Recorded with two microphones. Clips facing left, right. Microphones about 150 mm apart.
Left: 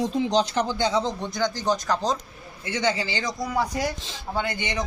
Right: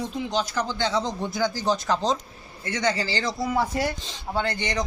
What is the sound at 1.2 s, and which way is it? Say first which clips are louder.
Speech: right 1 dB; 5° right (ahead or behind).